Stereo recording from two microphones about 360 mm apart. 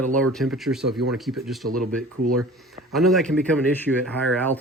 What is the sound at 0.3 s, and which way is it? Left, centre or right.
Speech, centre.